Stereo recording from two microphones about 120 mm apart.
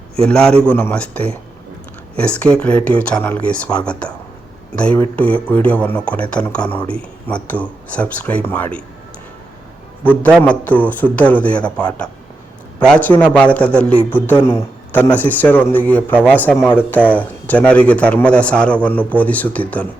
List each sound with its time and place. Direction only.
0.3 s a man's voice: 5° left (ahead or behind)
3.4 s a man's voice: 10° left (ahead or behind)
10.0 s a man's voice: 15° left (ahead or behind)